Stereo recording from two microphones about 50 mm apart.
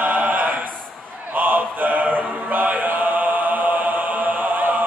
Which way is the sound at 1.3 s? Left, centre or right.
Right.